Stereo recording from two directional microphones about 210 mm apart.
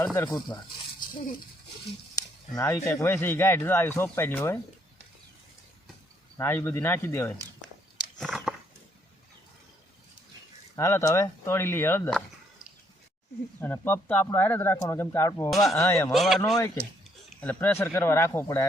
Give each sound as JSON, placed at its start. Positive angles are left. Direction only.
{"t": 0.0, "sound": "speech", "side_deg": 15}
{"t": 2.1, "sound": "speech", "side_deg": 15}
{"t": 6.3, "sound": "speech", "side_deg": 10}
{"t": 8.2, "sound": "a sound", "side_deg": 0}
{"t": 10.8, "sound": "speech", "side_deg": 15}
{"t": 13.6, "sound": "speech", "side_deg": 10}
{"t": 16.1, "sound": "speech", "side_deg": 0}